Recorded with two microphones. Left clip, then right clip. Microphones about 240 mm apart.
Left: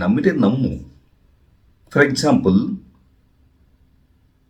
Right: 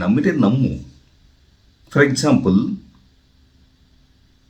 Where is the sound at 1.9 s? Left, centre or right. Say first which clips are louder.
Even; centre.